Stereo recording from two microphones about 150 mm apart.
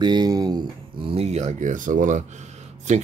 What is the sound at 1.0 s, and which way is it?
Speech, 40° right (ahead or behind).